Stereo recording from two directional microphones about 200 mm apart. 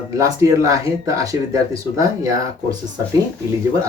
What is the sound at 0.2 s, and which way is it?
Speech, 15° right (ahead or behind).